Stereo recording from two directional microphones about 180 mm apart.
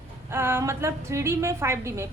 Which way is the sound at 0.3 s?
15° right (ahead or behind).